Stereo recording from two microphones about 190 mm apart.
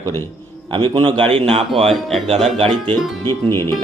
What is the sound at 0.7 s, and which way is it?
A man's voice, 25° right (ahead or behind).